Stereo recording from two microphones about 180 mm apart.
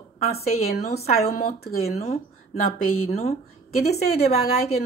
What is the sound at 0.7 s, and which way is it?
A woman's voice, 60° left (ahead or behind).